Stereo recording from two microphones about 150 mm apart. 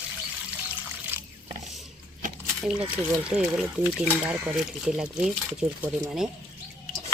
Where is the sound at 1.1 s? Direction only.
15° right (ahead or behind).